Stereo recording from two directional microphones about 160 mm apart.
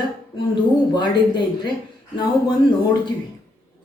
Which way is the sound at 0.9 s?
25° left (ahead or behind).